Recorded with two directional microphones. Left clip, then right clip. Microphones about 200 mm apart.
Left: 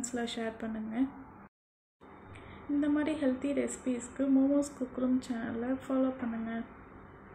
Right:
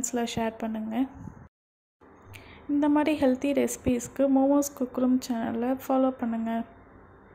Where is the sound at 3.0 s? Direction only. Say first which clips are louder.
Right 7 dB; 40° right (ahead or behind).